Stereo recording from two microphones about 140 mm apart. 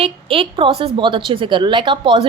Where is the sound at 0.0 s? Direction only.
40° right (ahead or behind).